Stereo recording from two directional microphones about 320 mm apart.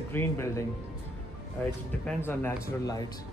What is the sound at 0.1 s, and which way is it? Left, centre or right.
Speech, centre.